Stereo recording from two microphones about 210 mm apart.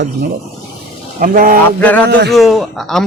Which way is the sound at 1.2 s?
40° right (ahead or behind).